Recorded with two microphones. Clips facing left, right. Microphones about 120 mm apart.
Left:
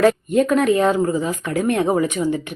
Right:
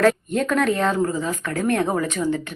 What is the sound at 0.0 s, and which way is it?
A woman's voice, 5° left (ahead or behind).